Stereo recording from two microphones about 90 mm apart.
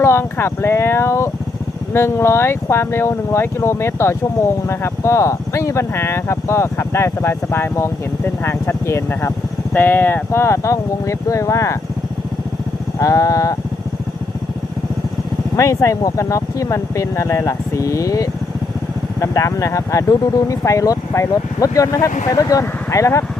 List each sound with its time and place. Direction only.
0.0 s speech: 30° left (ahead or behind)
13.0 s speech: 35° left (ahead or behind)
15.5 s speech: 35° left (ahead or behind)